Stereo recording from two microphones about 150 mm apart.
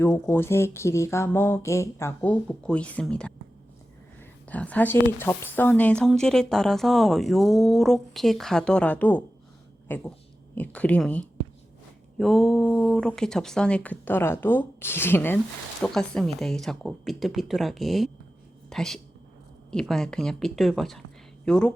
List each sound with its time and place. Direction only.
0.0 s speech: 15° left (ahead or behind)
15.8 s speech: 5° left (ahead or behind)